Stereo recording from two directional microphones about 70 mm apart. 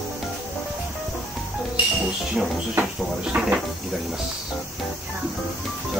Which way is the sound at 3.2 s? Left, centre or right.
Centre.